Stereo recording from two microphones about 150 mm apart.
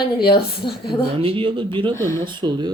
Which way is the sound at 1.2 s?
35° right (ahead or behind).